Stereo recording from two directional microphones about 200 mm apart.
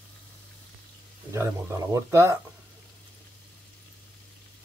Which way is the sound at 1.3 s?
15° right (ahead or behind).